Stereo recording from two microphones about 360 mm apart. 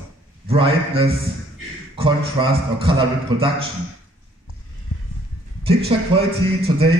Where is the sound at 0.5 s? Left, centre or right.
Centre.